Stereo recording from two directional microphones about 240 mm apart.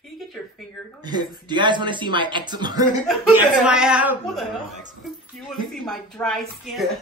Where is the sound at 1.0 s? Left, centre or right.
Centre.